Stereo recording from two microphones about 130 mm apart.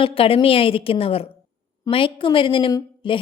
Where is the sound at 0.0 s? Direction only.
45° left (ahead or behind).